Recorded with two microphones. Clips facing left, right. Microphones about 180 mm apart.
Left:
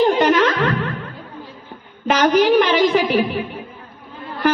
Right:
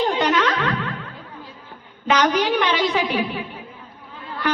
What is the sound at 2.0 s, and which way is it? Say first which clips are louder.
A woman's voice: left 5 dB; 45° left (ahead or behind).